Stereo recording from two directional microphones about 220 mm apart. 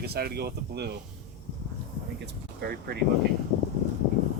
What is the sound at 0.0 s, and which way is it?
Speech, 45° right (ahead or behind).